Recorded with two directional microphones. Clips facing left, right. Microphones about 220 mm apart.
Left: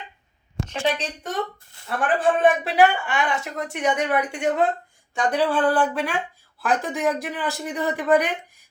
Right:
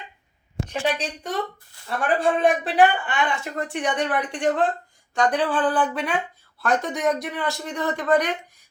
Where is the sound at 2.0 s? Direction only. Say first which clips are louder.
Left 1 dB; centre (ahead or behind).